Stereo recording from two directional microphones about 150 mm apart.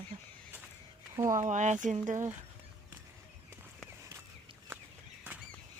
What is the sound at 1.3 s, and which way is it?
Speech, 55° right (ahead or behind).